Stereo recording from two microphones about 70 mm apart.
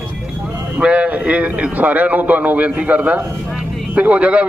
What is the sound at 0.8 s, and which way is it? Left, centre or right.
A man's voice, centre.